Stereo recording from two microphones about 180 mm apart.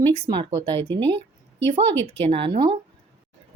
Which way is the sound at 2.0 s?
10° left (ahead or behind).